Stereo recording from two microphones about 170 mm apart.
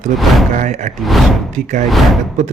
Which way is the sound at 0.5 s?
45° right (ahead or behind).